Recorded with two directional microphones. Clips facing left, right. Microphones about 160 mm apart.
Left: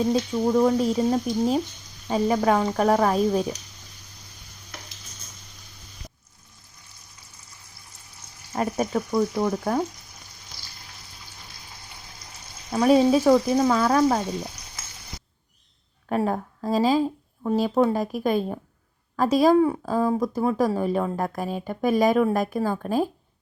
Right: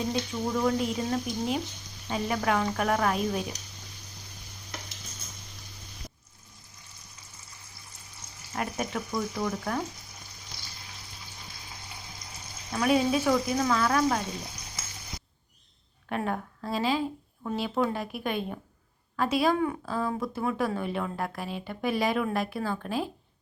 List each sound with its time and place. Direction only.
0.1 s speech: 35° left (ahead or behind)
8.5 s speech: 35° left (ahead or behind)
12.7 s speech: 35° left (ahead or behind)
16.0 s speech: 35° left (ahead or behind)